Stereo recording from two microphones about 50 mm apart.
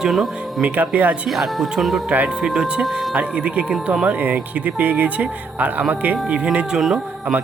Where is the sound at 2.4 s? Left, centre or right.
Centre.